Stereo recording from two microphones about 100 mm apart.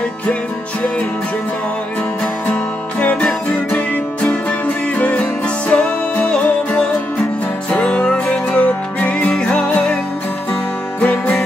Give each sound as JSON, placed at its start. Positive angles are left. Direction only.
{"t": 3.0, "sound": "music", "side_deg": 10}
{"t": 11.0, "sound": "music", "side_deg": 15}